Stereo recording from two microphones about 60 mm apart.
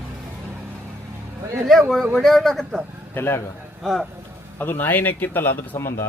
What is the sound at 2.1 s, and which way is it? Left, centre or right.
Speech, centre.